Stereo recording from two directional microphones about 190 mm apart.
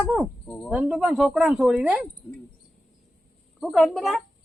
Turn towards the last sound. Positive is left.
turn(degrees=0)  # may be behind; listen again after turning